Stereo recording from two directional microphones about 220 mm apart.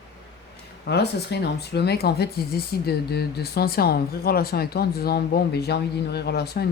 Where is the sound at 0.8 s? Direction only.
50° left (ahead or behind).